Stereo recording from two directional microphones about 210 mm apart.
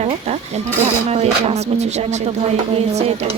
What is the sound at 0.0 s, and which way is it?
Speech, 30° right (ahead or behind).